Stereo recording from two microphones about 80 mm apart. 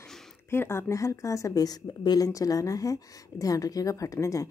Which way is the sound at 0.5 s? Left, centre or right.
Left.